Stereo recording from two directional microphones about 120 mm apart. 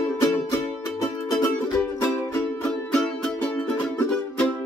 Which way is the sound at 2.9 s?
5° left (ahead or behind).